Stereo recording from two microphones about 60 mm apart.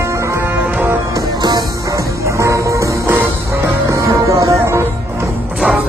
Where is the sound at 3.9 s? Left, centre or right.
Right.